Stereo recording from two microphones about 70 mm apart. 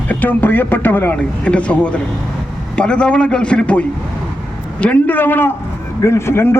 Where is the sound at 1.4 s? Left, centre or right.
Centre.